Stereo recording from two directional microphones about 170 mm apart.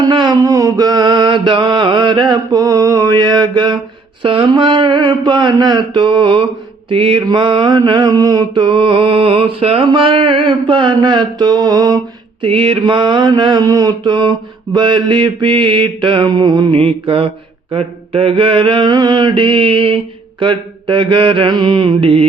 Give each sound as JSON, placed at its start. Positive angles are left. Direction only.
{"t": 0.0, "sound": "mantra", "side_deg": -25}